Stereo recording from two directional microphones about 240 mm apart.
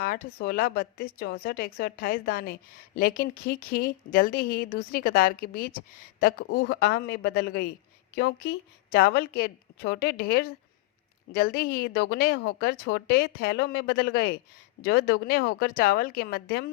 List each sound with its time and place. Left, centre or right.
0.0 s a woman's voice: left